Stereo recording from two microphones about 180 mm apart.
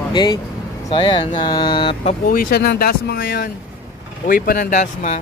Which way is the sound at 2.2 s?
50° left (ahead or behind).